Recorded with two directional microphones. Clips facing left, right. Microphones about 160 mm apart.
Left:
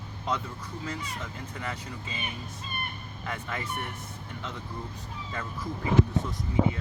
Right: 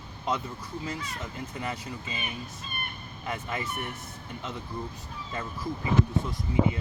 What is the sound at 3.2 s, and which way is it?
Speech, 20° right (ahead or behind).